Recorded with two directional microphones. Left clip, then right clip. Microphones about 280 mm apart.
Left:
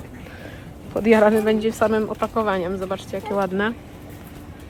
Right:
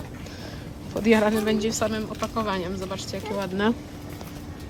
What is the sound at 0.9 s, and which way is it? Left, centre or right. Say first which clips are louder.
Speech: left 5 dB; centre.